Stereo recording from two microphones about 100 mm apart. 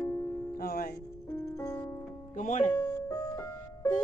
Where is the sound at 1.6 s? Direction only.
25° left (ahead or behind).